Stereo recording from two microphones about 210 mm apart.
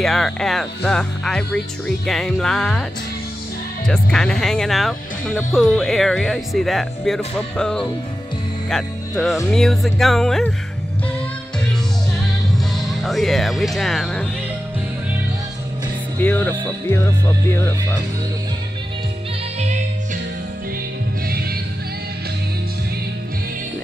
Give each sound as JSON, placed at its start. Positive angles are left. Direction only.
{"t": 0.0, "sound": "speech", "side_deg": 0}
{"t": 3.8, "sound": "speech", "side_deg": 5}
{"t": 8.6, "sound": "music", "side_deg": 0}
{"t": 9.5, "sound": "speech", "side_deg": 0}
{"t": 12.5, "sound": "speech", "side_deg": 0}
{"t": 16.2, "sound": "speech", "side_deg": 10}
{"t": 21.3, "sound": "music", "side_deg": -45}